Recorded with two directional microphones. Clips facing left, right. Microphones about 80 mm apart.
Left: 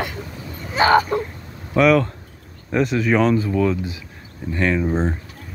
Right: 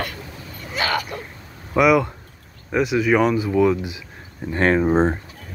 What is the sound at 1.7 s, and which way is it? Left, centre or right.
Speech, centre.